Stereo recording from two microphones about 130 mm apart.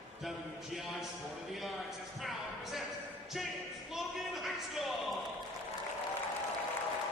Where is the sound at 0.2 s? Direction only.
Centre (ahead or behind).